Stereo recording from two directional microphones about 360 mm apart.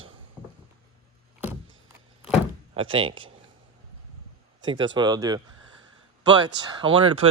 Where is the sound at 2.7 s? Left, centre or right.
Centre.